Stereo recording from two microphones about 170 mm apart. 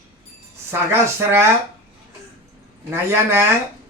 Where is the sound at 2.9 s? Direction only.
15° right (ahead or behind).